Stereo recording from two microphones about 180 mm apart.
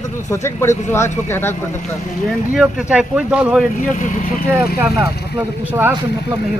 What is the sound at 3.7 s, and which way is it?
Speech, 45° left (ahead or behind).